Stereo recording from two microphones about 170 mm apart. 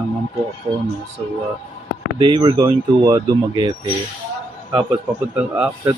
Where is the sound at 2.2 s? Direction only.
30° right (ahead or behind).